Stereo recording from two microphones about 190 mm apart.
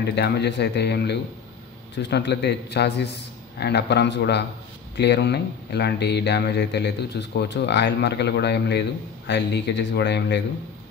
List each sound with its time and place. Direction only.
0.0 s speech: 60° left (ahead or behind)